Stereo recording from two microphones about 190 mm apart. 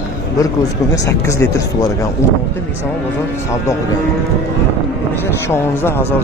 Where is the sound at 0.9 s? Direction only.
15° left (ahead or behind).